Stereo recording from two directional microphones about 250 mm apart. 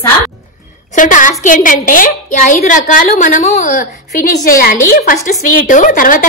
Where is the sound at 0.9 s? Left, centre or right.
Left.